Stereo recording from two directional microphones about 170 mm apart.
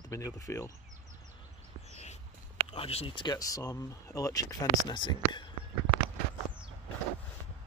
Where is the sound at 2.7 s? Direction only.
35° left (ahead or behind).